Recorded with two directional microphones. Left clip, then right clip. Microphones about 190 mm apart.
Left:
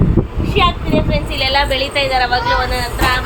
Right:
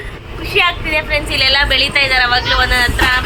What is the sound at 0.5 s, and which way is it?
Speech, centre (ahead or behind).